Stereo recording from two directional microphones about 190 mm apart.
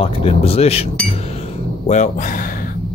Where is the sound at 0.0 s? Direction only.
30° left (ahead or behind).